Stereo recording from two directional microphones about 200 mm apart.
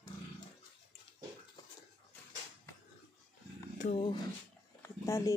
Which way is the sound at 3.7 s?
40° left (ahead or behind).